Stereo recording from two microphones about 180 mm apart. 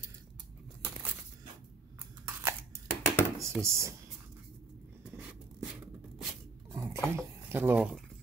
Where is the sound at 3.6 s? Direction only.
15° right (ahead or behind).